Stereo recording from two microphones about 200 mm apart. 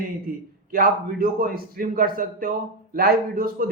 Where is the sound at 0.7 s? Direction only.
45° right (ahead or behind).